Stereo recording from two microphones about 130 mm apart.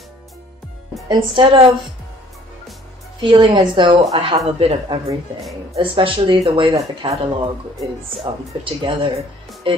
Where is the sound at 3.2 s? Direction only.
40° right (ahead or behind).